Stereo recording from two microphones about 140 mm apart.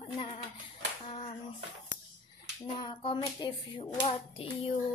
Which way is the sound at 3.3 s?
35° left (ahead or behind).